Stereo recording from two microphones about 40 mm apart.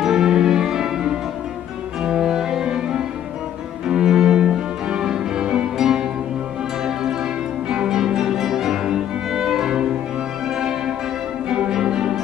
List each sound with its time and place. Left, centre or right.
0.0 s music: centre
2.0 s cello: centre
3.8 s music: centre
7.7 s music: centre
11.4 s music: right